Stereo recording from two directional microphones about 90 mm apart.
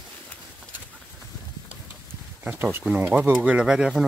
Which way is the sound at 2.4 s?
25° right (ahead or behind).